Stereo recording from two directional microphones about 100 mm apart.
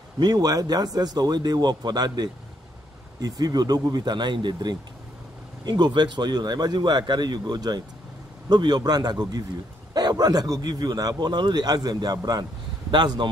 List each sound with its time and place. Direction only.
0.2 s a man's voice: 40° right (ahead or behind)